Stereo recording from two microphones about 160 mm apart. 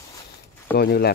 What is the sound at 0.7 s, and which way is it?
Speech, 80° left.